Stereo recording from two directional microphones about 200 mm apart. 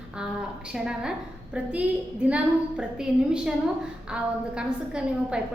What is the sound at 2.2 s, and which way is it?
A woman's voice, 5° right (ahead or behind).